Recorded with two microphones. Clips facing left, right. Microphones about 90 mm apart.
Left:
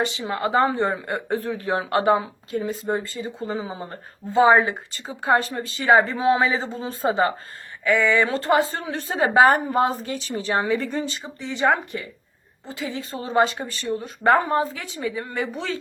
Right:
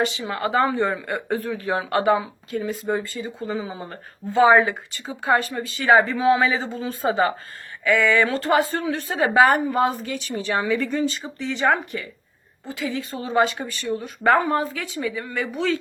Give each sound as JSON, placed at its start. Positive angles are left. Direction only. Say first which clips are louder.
{"t": 0.0, "sound": "a woman's voice", "louder": "even", "side_deg": 25}